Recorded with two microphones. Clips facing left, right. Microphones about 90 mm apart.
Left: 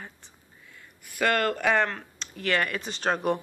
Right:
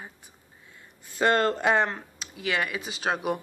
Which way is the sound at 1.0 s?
25° right (ahead or behind).